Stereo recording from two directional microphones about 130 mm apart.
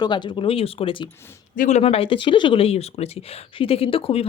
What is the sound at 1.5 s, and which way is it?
Speech, 90° left.